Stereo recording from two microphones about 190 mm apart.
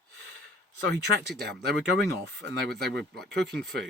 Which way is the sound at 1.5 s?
65° right (ahead or behind).